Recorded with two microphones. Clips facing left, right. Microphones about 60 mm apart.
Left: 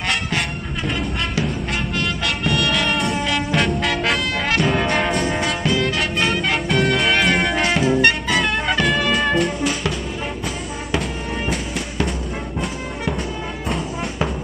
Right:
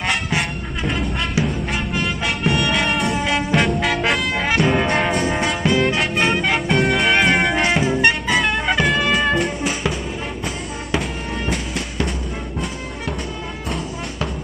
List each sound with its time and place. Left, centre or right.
0.4 s music: centre
2.0 s music: centre
5.7 s music: right
6.4 s music: centre
10.9 s music: centre